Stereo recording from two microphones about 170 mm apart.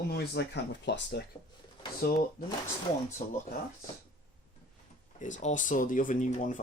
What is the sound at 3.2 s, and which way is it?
Speech, 50° left (ahead or behind).